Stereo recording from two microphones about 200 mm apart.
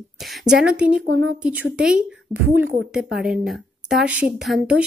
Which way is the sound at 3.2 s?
5° right (ahead or behind).